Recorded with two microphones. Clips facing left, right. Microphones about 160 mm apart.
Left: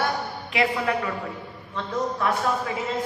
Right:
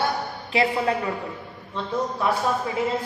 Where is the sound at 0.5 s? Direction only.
30° right (ahead or behind).